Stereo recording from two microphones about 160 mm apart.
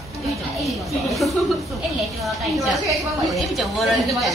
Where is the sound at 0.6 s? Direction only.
Centre (ahead or behind).